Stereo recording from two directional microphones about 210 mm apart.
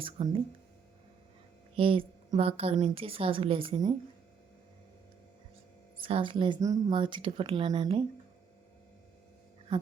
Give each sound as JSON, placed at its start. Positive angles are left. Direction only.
{"t": 0.0, "sound": "speech", "side_deg": -25}
{"t": 1.7, "sound": "a woman's voice", "side_deg": -25}
{"t": 6.0, "sound": "a woman's voice", "side_deg": -25}